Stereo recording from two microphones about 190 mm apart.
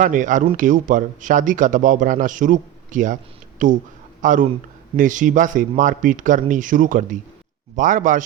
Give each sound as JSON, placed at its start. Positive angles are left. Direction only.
{"t": 0.0, "sound": "a man's voice", "side_deg": -45}